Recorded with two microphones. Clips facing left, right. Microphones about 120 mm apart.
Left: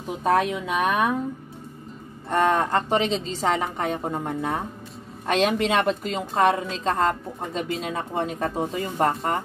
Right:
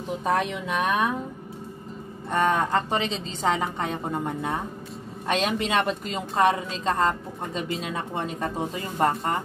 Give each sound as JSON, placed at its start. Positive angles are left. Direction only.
{"t": 0.2, "sound": "a woman's voice", "side_deg": 0}
{"t": 2.2, "sound": "a woman's voice", "side_deg": 0}